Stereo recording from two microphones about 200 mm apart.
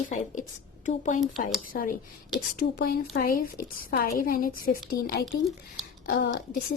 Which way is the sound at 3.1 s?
45° left (ahead or behind).